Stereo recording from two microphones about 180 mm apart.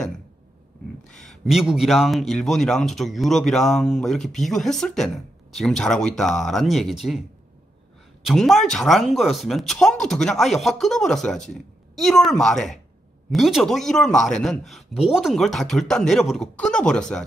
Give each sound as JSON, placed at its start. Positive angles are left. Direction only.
{"t": 1.0, "sound": "speech", "side_deg": 0}
{"t": 8.3, "sound": "speech", "side_deg": 0}